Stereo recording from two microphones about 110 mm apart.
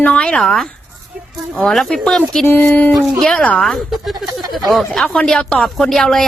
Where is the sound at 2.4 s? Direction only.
15° left (ahead or behind).